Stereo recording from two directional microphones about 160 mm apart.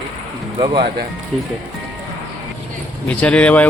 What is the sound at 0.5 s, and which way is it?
Speech, 25° right (ahead or behind).